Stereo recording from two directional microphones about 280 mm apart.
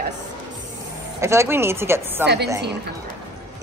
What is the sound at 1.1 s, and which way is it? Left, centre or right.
A woman's voice, centre.